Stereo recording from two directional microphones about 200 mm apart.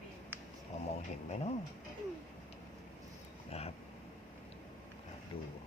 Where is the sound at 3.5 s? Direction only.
30° left (ahead or behind).